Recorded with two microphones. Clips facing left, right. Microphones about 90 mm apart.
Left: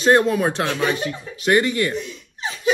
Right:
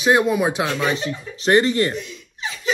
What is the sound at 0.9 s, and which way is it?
Speech, 25° right (ahead or behind).